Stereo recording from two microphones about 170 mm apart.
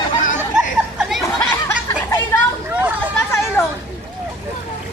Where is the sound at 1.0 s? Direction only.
Centre (ahead or behind).